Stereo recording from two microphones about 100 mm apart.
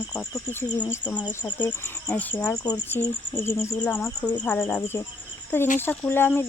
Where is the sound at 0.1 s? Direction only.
25° left (ahead or behind).